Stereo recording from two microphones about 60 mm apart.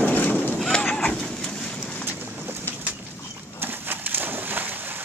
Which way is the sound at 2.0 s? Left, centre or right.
Right.